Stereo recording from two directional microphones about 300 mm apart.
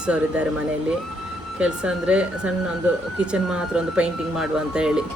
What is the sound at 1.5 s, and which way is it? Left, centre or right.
Speech, centre.